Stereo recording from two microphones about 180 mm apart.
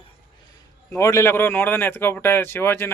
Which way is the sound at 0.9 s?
15° left (ahead or behind).